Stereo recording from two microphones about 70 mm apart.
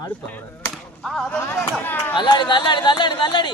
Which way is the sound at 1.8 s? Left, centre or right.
Left.